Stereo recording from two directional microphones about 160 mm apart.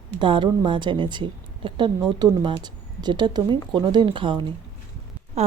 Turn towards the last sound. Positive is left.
turn(degrees=-40)  # may be behind; listen again after turning